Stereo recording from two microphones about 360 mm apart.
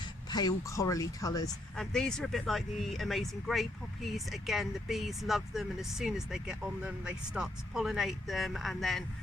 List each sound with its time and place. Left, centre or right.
0.3 s speech: centre